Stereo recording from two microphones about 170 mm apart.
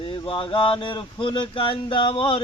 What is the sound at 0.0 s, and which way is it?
Mantra, 30° left (ahead or behind).